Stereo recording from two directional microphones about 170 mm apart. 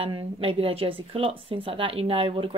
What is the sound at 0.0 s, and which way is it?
Speech, 35° right (ahead or behind).